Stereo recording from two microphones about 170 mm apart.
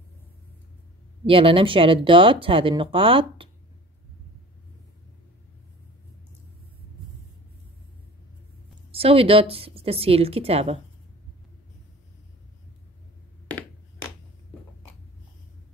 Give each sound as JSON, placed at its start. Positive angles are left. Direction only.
{"t": 1.2, "sound": "speech", "side_deg": -30}
{"t": 8.9, "sound": "speech", "side_deg": -35}